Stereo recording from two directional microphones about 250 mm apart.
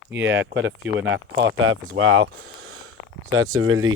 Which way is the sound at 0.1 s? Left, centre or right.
Right.